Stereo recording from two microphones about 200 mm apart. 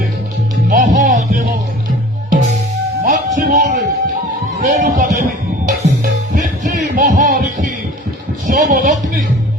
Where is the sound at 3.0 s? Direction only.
40° right (ahead or behind).